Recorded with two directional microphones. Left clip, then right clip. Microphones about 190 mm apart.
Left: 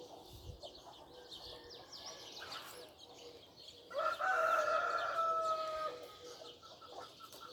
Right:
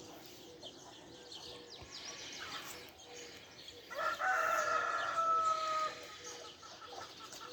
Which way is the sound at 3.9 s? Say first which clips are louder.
Even; 45° left (ahead or behind).